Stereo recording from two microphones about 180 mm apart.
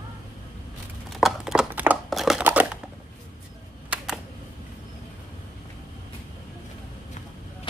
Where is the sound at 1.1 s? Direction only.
Centre (ahead or behind).